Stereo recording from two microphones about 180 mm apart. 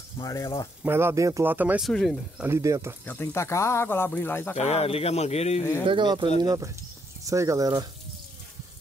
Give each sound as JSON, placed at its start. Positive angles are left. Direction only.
{"t": 0.2, "sound": "speech", "side_deg": 20}
{"t": 0.8, "sound": "speech", "side_deg": -15}
{"t": 2.4, "sound": "speech", "side_deg": -15}
{"t": 3.1, "sound": "speech", "side_deg": 15}
{"t": 4.6, "sound": "speech", "side_deg": 35}
{"t": 5.9, "sound": "speech", "side_deg": -25}